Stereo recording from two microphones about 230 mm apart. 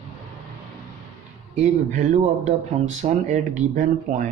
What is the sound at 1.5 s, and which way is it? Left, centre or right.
Speech, right.